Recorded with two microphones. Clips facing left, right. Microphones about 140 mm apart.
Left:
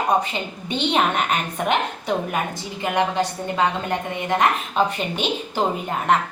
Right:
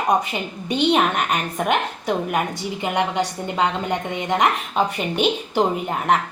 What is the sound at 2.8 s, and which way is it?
A woman's voice, 20° right (ahead or behind).